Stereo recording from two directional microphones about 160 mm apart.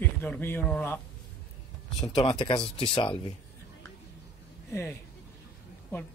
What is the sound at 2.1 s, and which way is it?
Speech, 30° left (ahead or behind).